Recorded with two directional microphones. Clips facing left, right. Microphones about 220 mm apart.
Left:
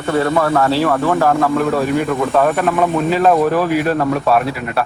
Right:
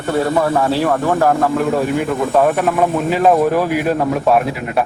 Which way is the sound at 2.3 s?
15° right (ahead or behind).